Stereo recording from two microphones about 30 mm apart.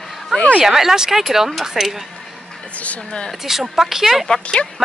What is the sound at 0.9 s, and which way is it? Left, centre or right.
Speech, centre.